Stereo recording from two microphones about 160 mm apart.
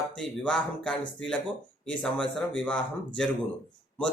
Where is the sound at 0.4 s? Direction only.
5° left (ahead or behind).